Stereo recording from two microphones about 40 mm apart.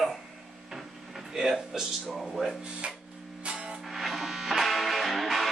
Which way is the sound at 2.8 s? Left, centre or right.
Right.